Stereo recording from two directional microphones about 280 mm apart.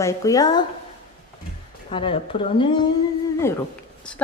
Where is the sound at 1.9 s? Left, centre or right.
Centre.